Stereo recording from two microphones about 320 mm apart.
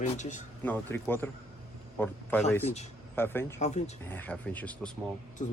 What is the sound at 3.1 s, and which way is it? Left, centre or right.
Speech, centre.